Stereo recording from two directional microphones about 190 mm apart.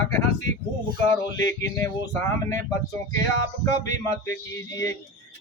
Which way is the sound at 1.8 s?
15° left (ahead or behind).